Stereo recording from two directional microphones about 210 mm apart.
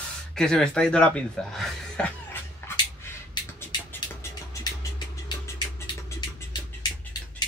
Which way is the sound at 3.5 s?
10° left (ahead or behind).